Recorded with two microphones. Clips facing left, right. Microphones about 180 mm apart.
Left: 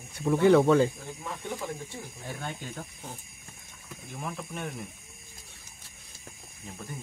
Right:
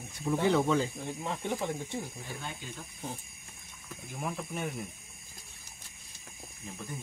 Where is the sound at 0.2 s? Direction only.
60° left (ahead or behind).